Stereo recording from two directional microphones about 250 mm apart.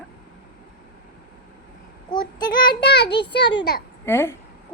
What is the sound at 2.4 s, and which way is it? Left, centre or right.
Speech, centre.